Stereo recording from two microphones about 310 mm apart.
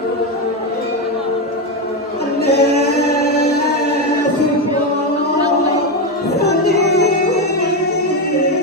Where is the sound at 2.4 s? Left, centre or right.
Left.